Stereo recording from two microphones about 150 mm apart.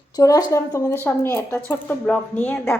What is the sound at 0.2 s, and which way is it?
A woman's voice, 25° left (ahead or behind).